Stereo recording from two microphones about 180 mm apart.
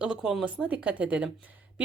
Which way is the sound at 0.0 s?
5° right (ahead or behind).